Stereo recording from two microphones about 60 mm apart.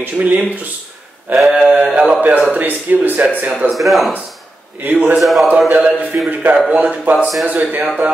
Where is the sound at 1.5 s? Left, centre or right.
Centre.